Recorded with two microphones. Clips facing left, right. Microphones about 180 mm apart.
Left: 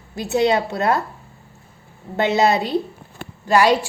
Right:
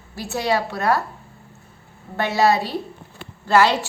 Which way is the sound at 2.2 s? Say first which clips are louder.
Left 1 dB; 20° left (ahead or behind).